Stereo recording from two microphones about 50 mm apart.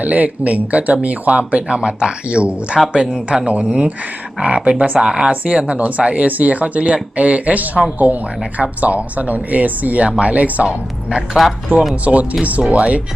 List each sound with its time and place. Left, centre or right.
0.0 s speech: right
11.4 s speech: centre
12.0 s speech: right